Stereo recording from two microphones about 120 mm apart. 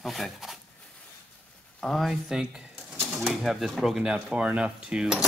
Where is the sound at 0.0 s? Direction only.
Centre (ahead or behind).